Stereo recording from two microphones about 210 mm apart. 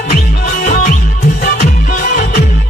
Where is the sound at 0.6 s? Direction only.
35° left (ahead or behind).